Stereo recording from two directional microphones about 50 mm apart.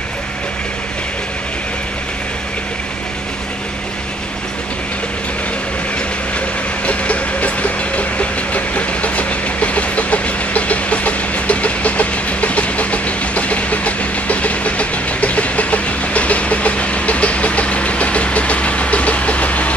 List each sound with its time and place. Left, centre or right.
6.9 s vehicle: left